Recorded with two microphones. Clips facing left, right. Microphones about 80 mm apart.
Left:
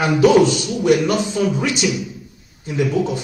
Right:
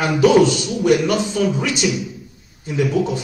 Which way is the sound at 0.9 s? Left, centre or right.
Centre.